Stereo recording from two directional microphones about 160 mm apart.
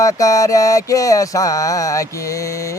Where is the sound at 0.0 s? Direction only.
20° left (ahead or behind).